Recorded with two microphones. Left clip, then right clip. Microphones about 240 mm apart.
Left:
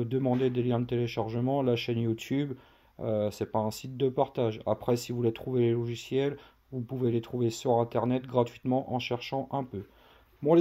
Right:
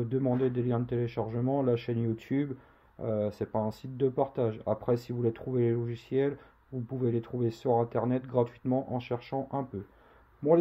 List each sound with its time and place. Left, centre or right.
0.0 s speech: left